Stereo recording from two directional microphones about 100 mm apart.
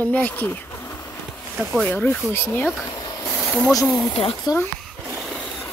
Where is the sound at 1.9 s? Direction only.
15° left (ahead or behind).